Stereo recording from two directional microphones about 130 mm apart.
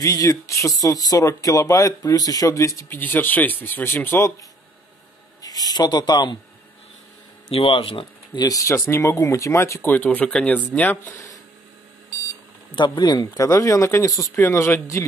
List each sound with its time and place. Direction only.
0.0 s speech: 25° left (ahead or behind)
5.4 s speech: 30° left (ahead or behind)
7.5 s speech: 45° left (ahead or behind); by 11.1 s 15° left (ahead or behind)
12.7 s speech: 35° left (ahead or behind); by 15.0 s 20° left (ahead or behind)